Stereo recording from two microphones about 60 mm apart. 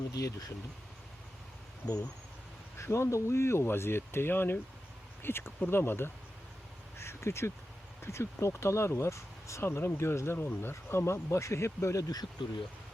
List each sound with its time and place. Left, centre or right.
0.2 s speech: left
1.8 s speech: left
2.7 s speech: left